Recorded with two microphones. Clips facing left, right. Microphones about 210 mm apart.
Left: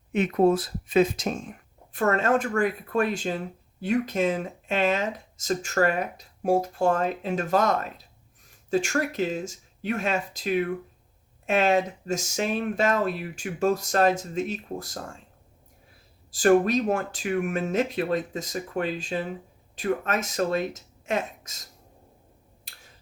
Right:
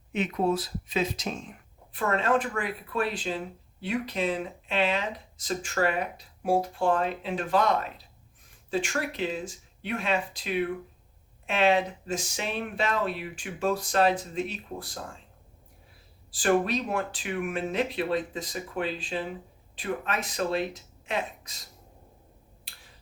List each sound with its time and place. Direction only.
0.1 s speech: 50° left (ahead or behind)
16.3 s speech: 45° left (ahead or behind)